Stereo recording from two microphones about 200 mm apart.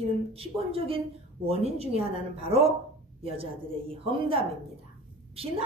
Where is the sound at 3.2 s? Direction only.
30° right (ahead or behind).